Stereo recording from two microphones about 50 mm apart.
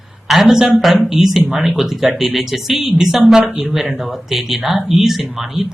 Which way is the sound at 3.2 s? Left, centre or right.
Right.